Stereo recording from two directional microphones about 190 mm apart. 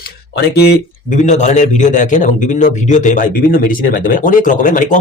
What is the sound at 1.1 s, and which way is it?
A man's voice, 40° left (ahead or behind).